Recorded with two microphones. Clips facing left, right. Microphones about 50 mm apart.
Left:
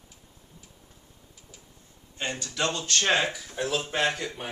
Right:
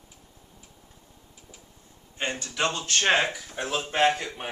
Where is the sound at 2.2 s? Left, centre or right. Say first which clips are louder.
Right 2 dB; right.